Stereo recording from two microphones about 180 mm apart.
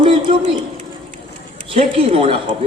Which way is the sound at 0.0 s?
30° right (ahead or behind).